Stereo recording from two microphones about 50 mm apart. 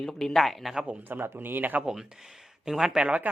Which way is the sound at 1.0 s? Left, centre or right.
Right.